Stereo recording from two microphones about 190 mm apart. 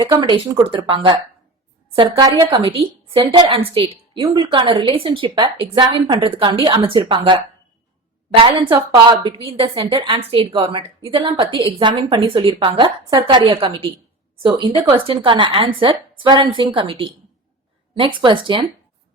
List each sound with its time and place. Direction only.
0.1 s a woman's voice: 20° right (ahead or behind)